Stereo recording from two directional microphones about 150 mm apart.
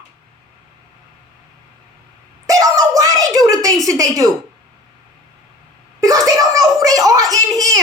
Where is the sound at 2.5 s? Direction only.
25° right (ahead or behind).